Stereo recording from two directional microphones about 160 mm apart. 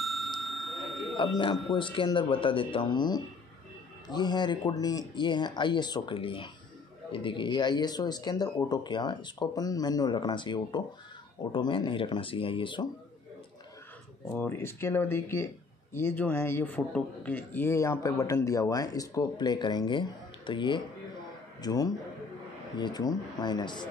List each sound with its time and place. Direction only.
0.0 s bicycle bell: centre (ahead or behind)
1.8 s speech: 30° left (ahead or behind)
14.3 s a man's voice: 15° left (ahead or behind)